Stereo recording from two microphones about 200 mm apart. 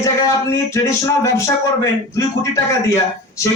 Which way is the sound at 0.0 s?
15° left (ahead or behind).